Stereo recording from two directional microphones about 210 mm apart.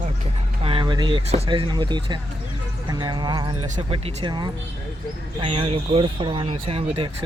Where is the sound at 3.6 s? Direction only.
30° right (ahead or behind).